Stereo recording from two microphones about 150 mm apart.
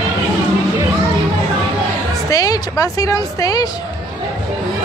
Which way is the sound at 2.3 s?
25° left (ahead or behind).